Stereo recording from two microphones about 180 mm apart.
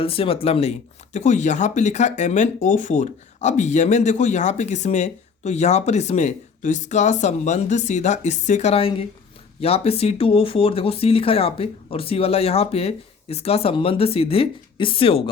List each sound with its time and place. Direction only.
0.0 s speech: 30° left (ahead or behind)